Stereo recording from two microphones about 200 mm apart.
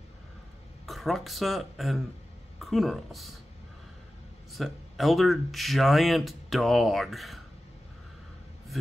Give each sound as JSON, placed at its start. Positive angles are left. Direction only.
{"t": 0.8, "sound": "speech", "side_deg": 0}
{"t": 4.5, "sound": "speech", "side_deg": 0}